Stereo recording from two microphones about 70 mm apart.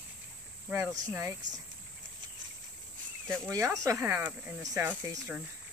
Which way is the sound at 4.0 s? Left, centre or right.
Right.